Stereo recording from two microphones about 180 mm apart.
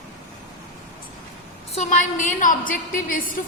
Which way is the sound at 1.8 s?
45° left (ahead or behind).